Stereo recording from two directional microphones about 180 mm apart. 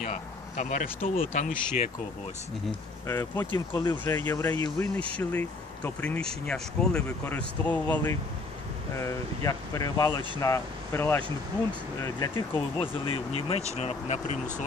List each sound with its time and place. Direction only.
0.0 s speech: 40° left (ahead or behind)
3.1 s speech: 15° left (ahead or behind)
3.5 s speech: 25° left (ahead or behind)
4.0 s speech: 10° left (ahead or behind); by 14.4 s 40° left (ahead or behind)